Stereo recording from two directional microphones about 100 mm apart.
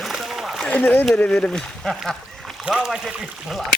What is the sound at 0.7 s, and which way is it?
Speech, 15° left (ahead or behind).